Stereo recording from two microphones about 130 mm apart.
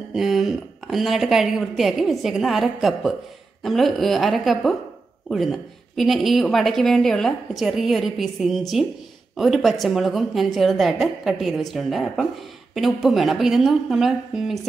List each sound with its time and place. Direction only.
0.1 s speech: centre (ahead or behind)